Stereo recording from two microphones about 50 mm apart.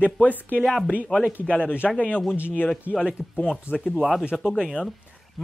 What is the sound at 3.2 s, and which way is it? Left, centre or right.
Speech, left.